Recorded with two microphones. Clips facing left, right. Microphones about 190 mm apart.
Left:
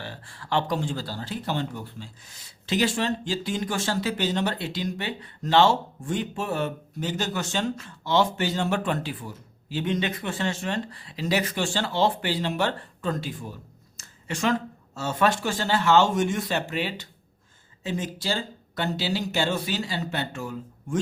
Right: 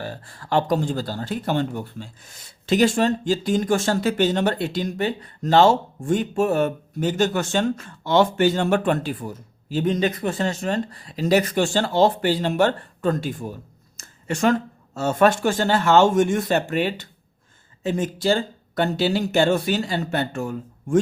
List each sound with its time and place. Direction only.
0.0 s speech: 45° right (ahead or behind)